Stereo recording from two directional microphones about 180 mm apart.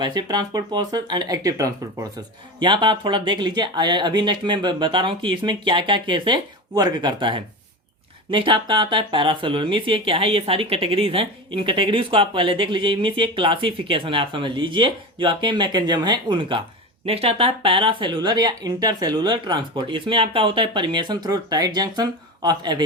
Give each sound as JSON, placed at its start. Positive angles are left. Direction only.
{"t": 0.0, "sound": "speech", "side_deg": -25}